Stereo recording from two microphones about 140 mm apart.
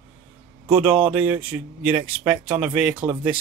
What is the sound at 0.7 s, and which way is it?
Speech, 15° right (ahead or behind).